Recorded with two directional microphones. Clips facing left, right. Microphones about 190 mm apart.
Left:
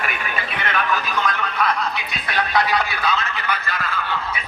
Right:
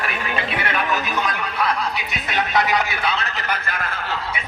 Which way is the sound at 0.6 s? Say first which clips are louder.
Left 3 dB; 15° right (ahead or behind).